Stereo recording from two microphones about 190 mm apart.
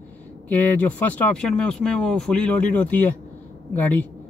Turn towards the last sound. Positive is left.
turn(degrees=10)  # may be behind; listen again after turning